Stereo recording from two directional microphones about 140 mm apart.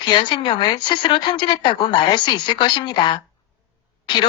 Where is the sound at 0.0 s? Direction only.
35° left (ahead or behind).